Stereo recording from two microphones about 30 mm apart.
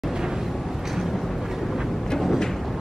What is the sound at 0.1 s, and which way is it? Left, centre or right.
Vehicle, centre.